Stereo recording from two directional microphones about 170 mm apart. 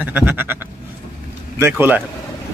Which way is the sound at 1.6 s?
10° right (ahead or behind).